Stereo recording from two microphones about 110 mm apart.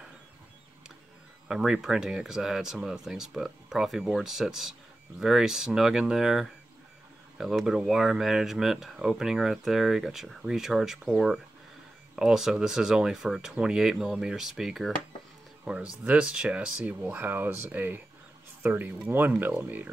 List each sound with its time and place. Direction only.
1.5 s speech: 5° right (ahead or behind)
15.6 s speech: 15° right (ahead or behind)